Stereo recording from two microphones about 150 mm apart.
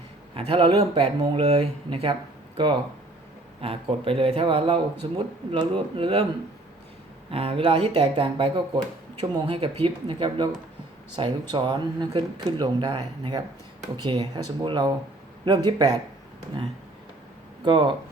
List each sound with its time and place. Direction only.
0.3 s speech: 35° right (ahead or behind)
3.6 s speech: 40° right (ahead or behind)
7.3 s speech: 40° right (ahead or behind)
17.6 s speech: 30° right (ahead or behind)